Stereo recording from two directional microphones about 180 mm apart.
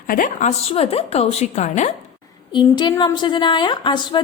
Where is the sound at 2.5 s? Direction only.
25° left (ahead or behind).